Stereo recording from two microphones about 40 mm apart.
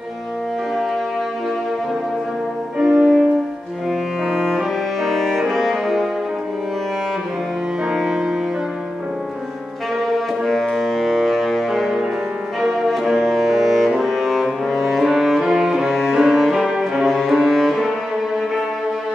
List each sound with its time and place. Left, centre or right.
2.8 s music: centre
4.5 s music: centre
7.9 s music: centre
9.9 s music: centre
17.0 s cello: centre
17.3 s music: centre